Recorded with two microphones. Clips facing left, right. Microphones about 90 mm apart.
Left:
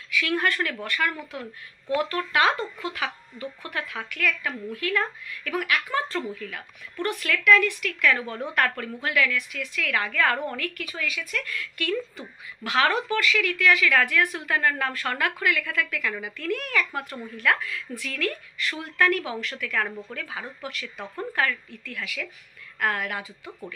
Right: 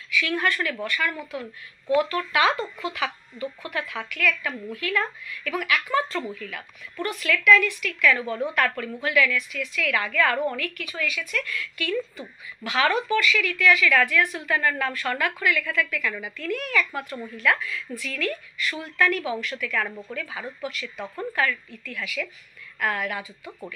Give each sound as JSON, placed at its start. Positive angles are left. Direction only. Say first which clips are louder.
{"t": 0.2, "sound": "a woman's voice", "louder": "even", "side_deg": 45}
{"t": 7.1, "sound": "a woman's voice", "louder": "right 1 dB", "side_deg": 50}
{"t": 16.1, "sound": "a woman's voice", "louder": "even", "side_deg": 0}
{"t": 16.3, "sound": "a woman's voice", "louder": "right 1 dB", "side_deg": 50}